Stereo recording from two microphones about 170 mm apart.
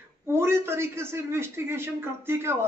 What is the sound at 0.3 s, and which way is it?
Speech, 15° right (ahead or behind).